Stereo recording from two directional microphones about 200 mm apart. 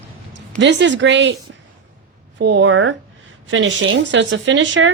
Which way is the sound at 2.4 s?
65° right (ahead or behind).